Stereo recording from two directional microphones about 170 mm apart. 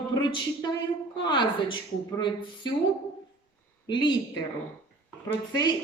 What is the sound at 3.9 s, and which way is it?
Speech, 30° left (ahead or behind).